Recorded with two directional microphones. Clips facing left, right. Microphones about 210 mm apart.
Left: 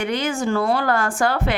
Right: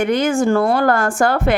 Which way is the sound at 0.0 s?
45° right (ahead or behind).